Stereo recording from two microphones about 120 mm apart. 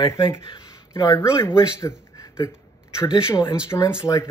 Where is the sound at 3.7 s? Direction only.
20° left (ahead or behind).